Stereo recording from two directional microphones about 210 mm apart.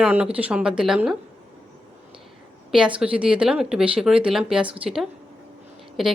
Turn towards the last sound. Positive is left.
turn(degrees=0)  # may be behind; listen again after turning